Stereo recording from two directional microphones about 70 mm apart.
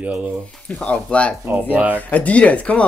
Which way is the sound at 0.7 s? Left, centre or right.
Centre.